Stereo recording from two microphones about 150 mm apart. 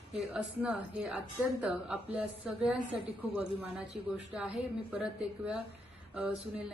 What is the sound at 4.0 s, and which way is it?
A woman's voice, 5° right (ahead or behind).